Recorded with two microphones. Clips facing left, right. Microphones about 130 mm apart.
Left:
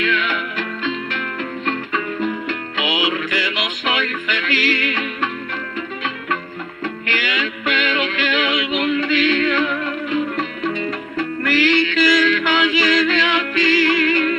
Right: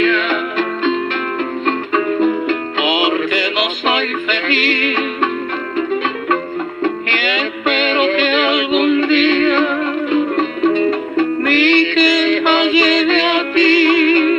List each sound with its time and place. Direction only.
0.0 s music: 35° right (ahead or behind)
1.7 s music: 30° right (ahead or behind)
7.3 s music: 30° right (ahead or behind)